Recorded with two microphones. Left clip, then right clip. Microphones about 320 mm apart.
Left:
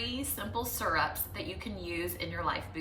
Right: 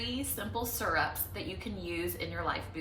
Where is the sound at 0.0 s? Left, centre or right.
Centre.